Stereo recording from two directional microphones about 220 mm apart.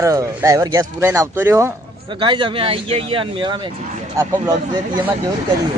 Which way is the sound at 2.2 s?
25° right (ahead or behind).